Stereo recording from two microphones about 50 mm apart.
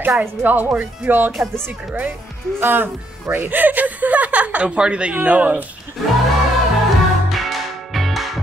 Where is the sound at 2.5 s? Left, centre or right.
Right.